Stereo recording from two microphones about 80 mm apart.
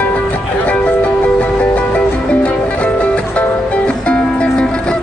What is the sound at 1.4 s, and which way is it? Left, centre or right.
Music, centre.